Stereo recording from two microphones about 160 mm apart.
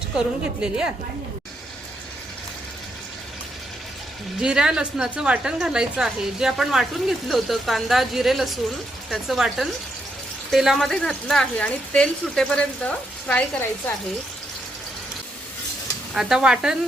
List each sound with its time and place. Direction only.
0.2 s speech: 5° right (ahead or behind)
4.4 s speech: 5° right (ahead or behind)
16.1 s speech: 5° right (ahead or behind)